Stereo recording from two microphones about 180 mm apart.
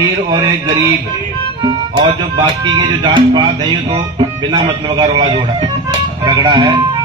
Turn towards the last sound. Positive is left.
turn(degrees=-25)  # may be behind; listen again after turning